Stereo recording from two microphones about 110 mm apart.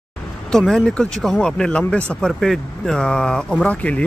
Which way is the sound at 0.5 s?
5° left (ahead or behind).